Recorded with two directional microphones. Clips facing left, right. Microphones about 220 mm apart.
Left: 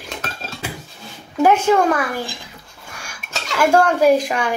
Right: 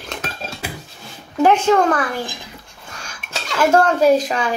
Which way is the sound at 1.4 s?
10° left (ahead or behind).